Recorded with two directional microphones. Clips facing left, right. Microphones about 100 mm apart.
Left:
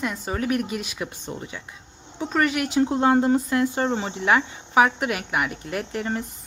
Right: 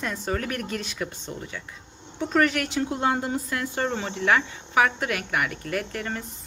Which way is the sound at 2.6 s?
20° left (ahead or behind).